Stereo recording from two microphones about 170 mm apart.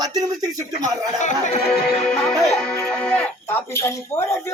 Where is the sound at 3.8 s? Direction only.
15° left (ahead or behind).